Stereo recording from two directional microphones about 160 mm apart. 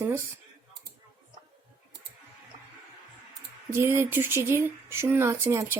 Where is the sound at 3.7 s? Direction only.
15° right (ahead or behind).